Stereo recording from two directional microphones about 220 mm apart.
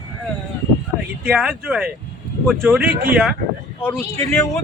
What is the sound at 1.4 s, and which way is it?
Speech, 5° right (ahead or behind).